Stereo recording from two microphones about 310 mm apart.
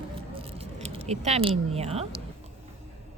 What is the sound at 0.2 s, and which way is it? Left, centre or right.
Keys jangling, centre.